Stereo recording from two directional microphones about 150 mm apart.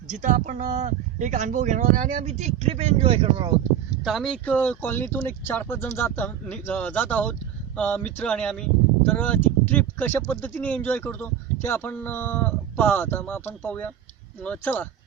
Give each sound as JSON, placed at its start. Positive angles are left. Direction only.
{"t": 0.1, "sound": "speech", "side_deg": -55}
{"t": 4.0, "sound": "speech", "side_deg": 0}